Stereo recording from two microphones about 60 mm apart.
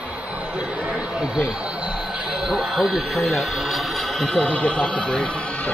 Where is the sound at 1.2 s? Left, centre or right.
Centre.